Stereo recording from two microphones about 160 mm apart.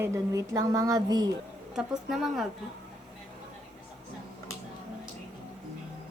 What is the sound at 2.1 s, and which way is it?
Speech, centre (ahead or behind).